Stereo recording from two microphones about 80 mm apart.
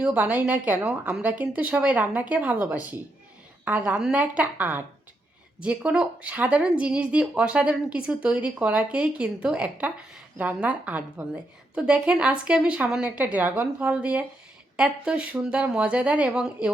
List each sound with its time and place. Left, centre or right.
0.0 s a woman's voice: centre